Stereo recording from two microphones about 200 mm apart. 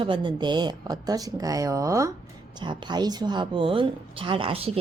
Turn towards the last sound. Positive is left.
turn(degrees=-30)  # may be behind; listen again after turning